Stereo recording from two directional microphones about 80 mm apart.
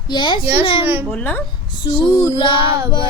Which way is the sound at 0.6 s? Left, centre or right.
Left.